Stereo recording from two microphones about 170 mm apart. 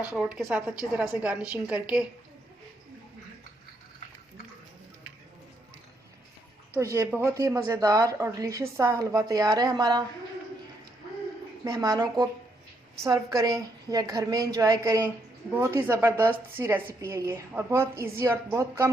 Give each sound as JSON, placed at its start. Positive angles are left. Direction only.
{"t": 0.1, "sound": "a woman's voice", "side_deg": -5}
{"t": 6.7, "sound": "a woman's voice", "side_deg": -15}
{"t": 11.6, "sound": "a woman's voice", "side_deg": -20}